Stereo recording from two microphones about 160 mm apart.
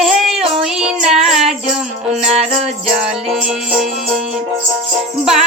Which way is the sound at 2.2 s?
40° right (ahead or behind).